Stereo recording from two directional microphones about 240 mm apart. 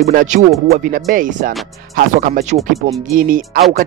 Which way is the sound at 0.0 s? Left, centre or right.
Right.